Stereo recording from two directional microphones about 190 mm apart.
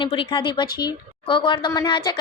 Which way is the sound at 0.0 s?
25° left (ahead or behind).